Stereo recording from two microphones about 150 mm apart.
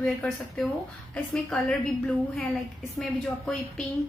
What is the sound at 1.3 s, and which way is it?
A woman's voice, 5° left (ahead or behind).